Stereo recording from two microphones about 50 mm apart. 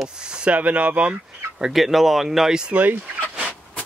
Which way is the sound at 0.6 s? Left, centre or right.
Right.